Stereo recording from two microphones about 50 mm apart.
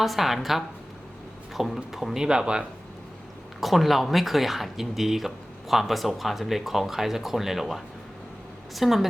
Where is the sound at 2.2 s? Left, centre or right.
Centre.